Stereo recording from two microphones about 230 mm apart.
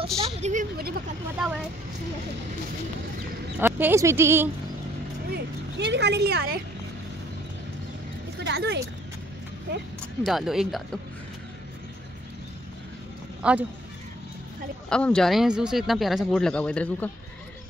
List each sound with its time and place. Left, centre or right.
0.4 s speech: right
1.3 s speech: centre
3.5 s speech: centre
5.3 s speech: right
8.5 s speech: right
10.2 s speech: centre
13.4 s speech: centre
14.9 s speech: centre